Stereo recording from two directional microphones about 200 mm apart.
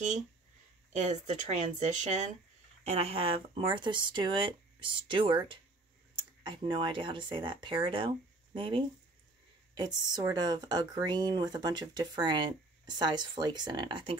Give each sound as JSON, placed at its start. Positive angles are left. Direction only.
{"t": 0.9, "sound": "speech", "side_deg": -35}